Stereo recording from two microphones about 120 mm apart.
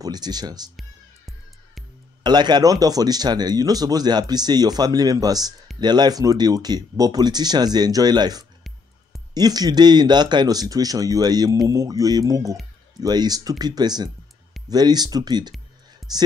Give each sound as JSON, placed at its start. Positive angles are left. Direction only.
{"t": 0.0, "sound": "speech", "side_deg": -35}
{"t": 2.2, "sound": "speech", "side_deg": -35}